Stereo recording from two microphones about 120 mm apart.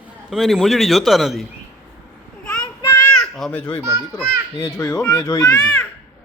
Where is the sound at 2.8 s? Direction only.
25° left (ahead or behind).